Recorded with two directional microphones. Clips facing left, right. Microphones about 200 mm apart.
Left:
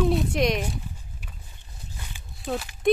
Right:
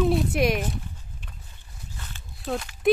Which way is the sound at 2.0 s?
15° left (ahead or behind).